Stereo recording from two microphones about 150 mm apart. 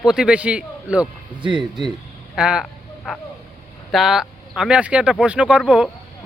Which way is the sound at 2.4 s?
5° right (ahead or behind).